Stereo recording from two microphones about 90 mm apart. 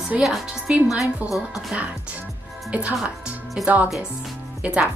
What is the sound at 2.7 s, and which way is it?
Speech, 15° right (ahead or behind).